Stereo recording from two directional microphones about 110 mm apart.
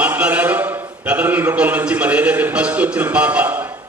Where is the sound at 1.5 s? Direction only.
10° right (ahead or behind).